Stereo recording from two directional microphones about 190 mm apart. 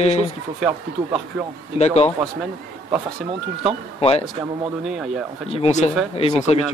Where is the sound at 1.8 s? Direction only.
35° left (ahead or behind).